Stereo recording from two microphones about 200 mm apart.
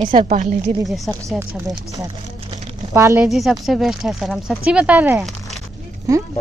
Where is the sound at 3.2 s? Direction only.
Centre (ahead or behind).